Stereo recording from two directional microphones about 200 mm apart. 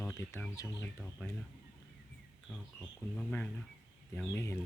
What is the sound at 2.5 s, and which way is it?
Speech, 5° left (ahead or behind).